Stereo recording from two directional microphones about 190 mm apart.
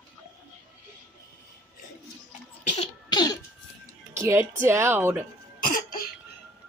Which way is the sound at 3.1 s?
20° left (ahead or behind).